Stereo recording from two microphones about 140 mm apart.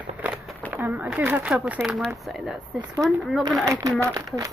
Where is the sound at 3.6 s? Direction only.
25° right (ahead or behind).